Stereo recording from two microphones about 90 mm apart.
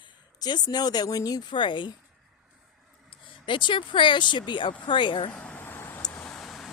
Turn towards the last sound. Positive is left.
turn(degrees=5)  # may be behind; listen again after turning